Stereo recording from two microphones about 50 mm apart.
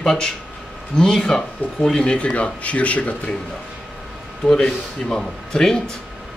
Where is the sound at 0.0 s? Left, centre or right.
Centre; by 3.3 s left.